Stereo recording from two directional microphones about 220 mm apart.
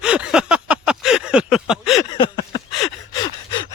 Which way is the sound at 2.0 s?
20° left (ahead or behind).